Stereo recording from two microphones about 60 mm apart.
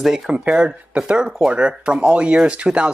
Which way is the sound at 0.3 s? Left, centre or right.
Centre.